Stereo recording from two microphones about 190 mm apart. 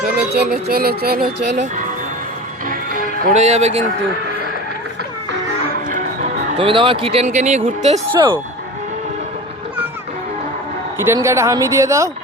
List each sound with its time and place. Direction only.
0.3 s music: 55° right (ahead or behind)
2.6 s music: 45° right (ahead or behind)
5.9 s music: 35° right (ahead or behind)
7.3 s speech: 35° right (ahead or behind)
10.9 s speech: 15° right (ahead or behind)